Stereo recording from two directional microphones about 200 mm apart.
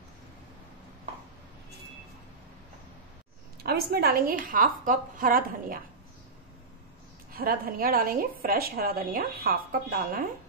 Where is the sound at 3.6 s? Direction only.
50° right (ahead or behind).